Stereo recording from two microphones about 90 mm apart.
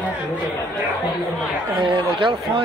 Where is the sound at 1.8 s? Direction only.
65° right (ahead or behind).